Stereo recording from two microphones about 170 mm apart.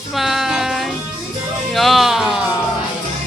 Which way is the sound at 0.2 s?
Centre (ahead or behind).